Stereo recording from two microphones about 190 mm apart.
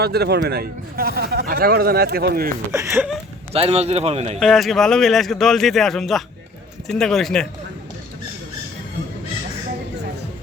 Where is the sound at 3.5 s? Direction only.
30° right (ahead or behind).